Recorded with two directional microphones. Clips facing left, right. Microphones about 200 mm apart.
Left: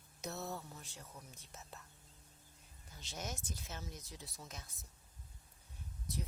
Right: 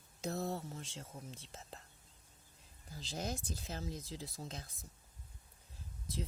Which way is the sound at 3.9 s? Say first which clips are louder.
Right 7 dB; 90° right.